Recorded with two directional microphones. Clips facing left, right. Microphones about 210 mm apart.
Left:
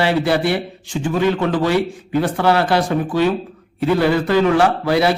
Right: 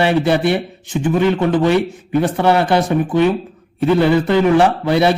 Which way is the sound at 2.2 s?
20° right (ahead or behind).